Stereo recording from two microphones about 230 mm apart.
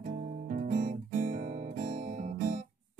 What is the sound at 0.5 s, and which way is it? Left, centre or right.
Guitar, right.